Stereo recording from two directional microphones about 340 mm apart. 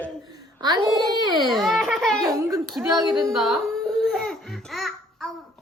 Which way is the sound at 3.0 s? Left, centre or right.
Centre.